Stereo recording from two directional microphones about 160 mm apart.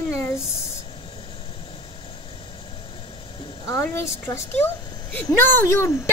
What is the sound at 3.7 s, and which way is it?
A woman's voice, 15° left (ahead or behind).